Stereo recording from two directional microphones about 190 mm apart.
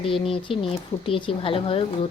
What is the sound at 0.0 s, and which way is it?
Speech, 30° left (ahead or behind).